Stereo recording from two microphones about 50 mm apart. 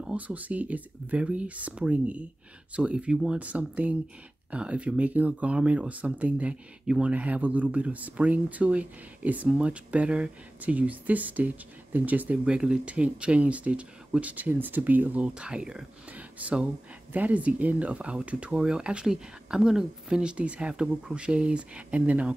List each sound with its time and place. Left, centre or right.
0.0 s speech: right
12.4 s speech: right
16.1 s a sound: right
17.1 s speech: right